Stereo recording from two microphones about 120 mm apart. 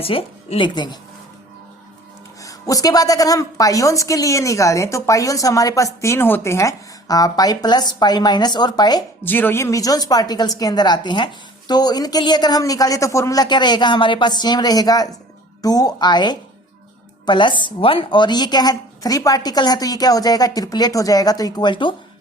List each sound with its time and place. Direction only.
0.0 s speech: 50° left (ahead or behind)
0.7 s a woman's voice: 35° left (ahead or behind)
2.4 s a woman's voice: 30° left (ahead or behind)
9.2 s a woman's voice: 15° left (ahead or behind); by 21.9 s 40° left (ahead or behind)